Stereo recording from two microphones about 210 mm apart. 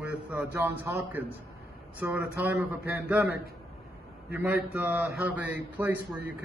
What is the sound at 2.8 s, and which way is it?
Speech, 45° left (ahead or behind).